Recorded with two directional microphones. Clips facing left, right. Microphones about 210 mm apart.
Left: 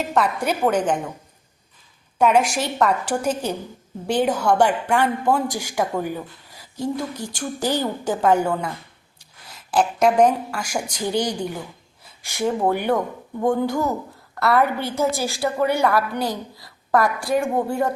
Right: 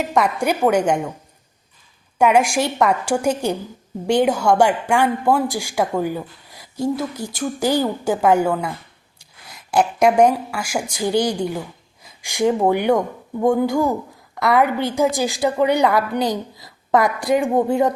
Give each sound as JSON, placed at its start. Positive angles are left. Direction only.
{"t": 0.0, "sound": "a woman's voice", "side_deg": -10}
{"t": 2.1, "sound": "a woman's voice", "side_deg": -10}